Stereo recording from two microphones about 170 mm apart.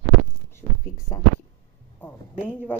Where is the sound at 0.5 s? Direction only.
20° left (ahead or behind).